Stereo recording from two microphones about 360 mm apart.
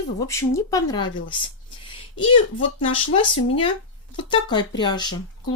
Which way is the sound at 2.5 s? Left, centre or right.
Left.